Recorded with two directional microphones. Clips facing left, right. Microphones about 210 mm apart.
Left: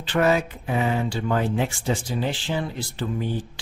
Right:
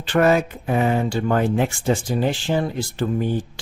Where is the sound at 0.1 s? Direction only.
50° right (ahead or behind).